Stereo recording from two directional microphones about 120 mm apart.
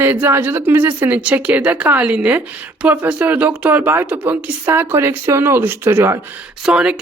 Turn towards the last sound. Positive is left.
turn(degrees=-5)  # may be behind; listen again after turning